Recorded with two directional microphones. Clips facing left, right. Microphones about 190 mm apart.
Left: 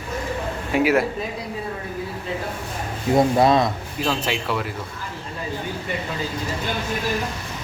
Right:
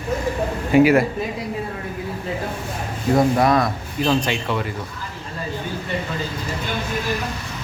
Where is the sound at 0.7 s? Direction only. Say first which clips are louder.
Right 5 dB; centre (ahead or behind).